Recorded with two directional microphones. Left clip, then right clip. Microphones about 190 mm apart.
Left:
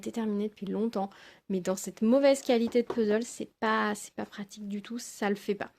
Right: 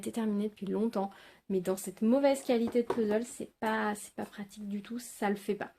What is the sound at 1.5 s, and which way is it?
A woman's voice, 45° left (ahead or behind).